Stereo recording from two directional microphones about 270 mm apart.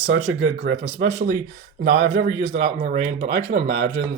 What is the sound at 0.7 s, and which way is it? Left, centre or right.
Speech, right.